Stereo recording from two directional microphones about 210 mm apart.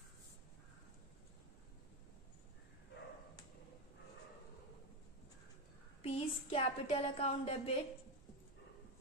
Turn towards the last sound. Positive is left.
turn(degrees=25)  # may be behind; listen again after turning